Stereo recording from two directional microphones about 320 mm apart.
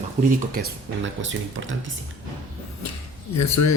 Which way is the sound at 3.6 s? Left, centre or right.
Left.